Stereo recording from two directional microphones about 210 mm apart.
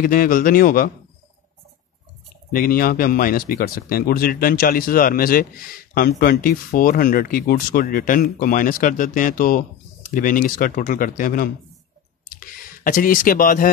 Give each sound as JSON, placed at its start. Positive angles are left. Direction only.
{"t": 0.0, "sound": "speech", "side_deg": 40}
{"t": 2.5, "sound": "speech", "side_deg": 45}
{"t": 12.3, "sound": "a sound", "side_deg": 45}